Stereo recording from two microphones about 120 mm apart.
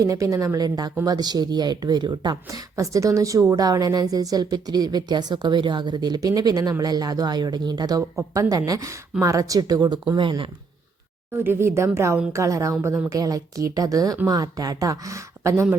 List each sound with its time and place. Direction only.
0.0 s speech: 25° right (ahead or behind); by 10.5 s 45° right (ahead or behind)
11.3 s speech: 20° right (ahead or behind)